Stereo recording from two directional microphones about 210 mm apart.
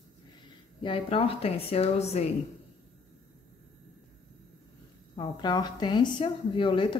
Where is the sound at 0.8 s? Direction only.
25° left (ahead or behind).